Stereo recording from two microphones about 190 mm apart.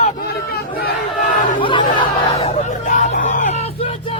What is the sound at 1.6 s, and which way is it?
Chatter, 25° left (ahead or behind).